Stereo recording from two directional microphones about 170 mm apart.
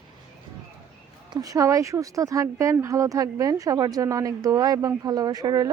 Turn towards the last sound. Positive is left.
turn(degrees=-20)  # may be behind; listen again after turning